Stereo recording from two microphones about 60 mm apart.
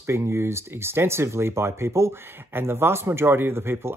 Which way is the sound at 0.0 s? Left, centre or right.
Right.